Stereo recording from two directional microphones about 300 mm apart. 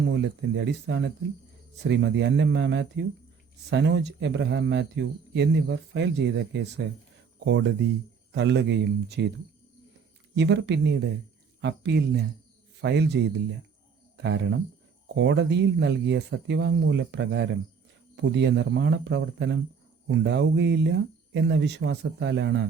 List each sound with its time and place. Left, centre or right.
0.0 s speech: right
10.3 s speech: right